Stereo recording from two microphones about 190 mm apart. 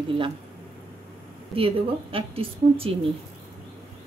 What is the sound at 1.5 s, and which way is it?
A woman's voice, 30° right (ahead or behind).